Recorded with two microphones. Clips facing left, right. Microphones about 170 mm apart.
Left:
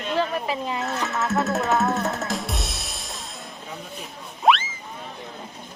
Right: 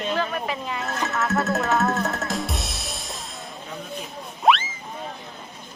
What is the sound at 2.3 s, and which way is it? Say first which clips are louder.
Drum kit: right 1 dB; centre (ahead or behind).